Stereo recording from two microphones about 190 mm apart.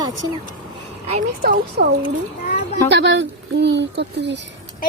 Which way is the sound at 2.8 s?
65° right (ahead or behind).